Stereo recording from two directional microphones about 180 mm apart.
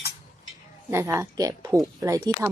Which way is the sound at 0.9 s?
15° right (ahead or behind).